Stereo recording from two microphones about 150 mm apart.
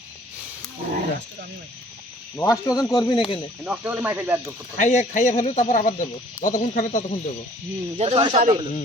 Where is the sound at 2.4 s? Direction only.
20° left (ahead or behind).